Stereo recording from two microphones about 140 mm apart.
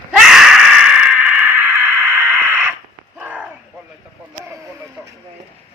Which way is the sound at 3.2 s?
10° right (ahead or behind).